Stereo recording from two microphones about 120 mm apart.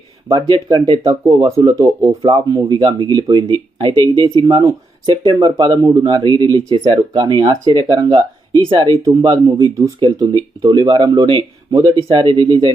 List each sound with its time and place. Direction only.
0.3 s speech: 45° right (ahead or behind)
5.5 s speech: 35° right (ahead or behind)